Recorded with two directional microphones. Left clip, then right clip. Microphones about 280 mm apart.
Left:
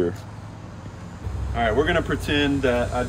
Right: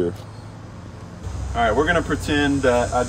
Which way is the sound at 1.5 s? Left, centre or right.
Centre.